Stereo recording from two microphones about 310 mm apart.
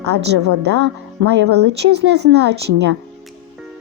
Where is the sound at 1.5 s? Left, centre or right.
Right.